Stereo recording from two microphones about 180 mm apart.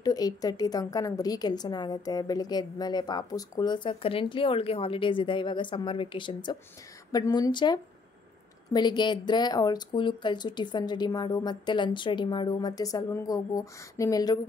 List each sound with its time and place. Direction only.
0.0 s a woman's voice: 20° left (ahead or behind)